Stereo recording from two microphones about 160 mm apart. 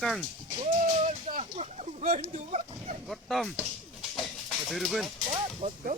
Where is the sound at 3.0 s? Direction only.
Centre (ahead or behind).